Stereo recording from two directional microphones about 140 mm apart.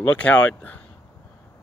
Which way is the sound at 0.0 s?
10° left (ahead or behind).